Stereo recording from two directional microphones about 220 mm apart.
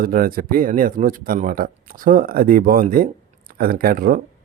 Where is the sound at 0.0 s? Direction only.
40° right (ahead or behind).